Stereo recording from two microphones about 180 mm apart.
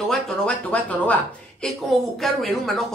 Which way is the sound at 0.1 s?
5° left (ahead or behind).